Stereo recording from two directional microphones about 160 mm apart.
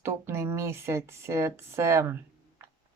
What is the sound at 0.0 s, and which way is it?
Speech, 15° right (ahead or behind).